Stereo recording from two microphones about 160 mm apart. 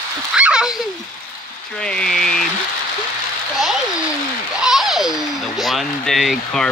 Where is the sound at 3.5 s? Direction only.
Centre (ahead or behind).